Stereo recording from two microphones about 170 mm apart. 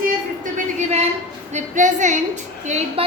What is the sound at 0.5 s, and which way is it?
A woman's voice, 40° right (ahead or behind).